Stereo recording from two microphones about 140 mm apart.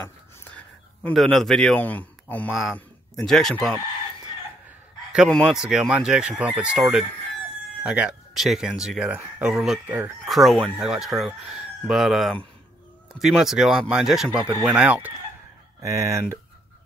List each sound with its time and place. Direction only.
0.0 s a sound: 15° left (ahead or behind)
2.5 s speech: 5° left (ahead or behind)
5.1 s speech: centre (ahead or behind)
15.9 s speech: 20° right (ahead or behind)